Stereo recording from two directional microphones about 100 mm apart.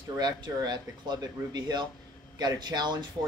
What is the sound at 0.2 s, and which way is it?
Speech, 45° right (ahead or behind).